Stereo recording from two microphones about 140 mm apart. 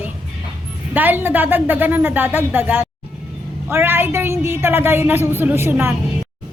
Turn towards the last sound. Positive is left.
turn(degrees=-15)  # may be behind; listen again after turning